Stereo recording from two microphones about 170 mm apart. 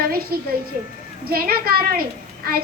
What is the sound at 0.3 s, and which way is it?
A child's voice, 60° right (ahead or behind).